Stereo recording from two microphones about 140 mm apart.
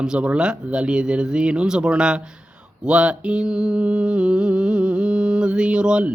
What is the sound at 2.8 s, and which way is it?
Mantra, 5° right (ahead or behind).